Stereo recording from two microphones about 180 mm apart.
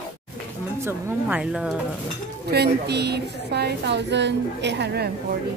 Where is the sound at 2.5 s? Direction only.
65° right (ahead or behind).